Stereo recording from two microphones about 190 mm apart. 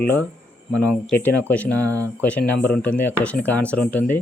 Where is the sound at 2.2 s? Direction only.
10° left (ahead or behind).